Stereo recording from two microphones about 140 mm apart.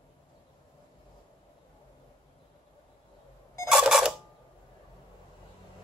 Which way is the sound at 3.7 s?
5° right (ahead or behind).